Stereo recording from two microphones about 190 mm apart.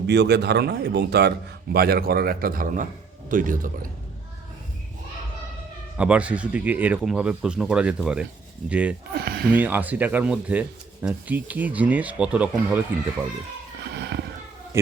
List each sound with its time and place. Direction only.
0.1 s a man's voice: 60° right (ahead or behind); by 3.7 s 45° right (ahead or behind)
6.0 s speech: 5° right (ahead or behind)
9.1 s speech: 55° right (ahead or behind)
9.5 s speech: 10° right (ahead or behind)
13.9 s a sound: 60° right (ahead or behind)